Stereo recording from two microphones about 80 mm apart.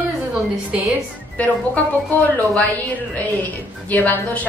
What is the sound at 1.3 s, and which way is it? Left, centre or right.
A woman's voice, centre.